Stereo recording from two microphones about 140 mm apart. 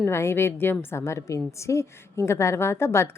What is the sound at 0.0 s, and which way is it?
A woman's voice, 20° left (ahead or behind).